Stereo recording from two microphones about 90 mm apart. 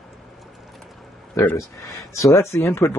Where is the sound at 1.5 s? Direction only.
30° left (ahead or behind).